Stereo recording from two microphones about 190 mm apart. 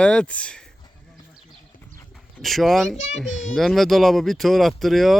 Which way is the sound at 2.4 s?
Centre (ahead or behind).